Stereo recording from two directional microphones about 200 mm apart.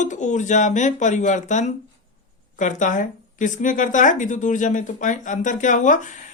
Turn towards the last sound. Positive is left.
turn(degrees=40)  # may be behind; listen again after turning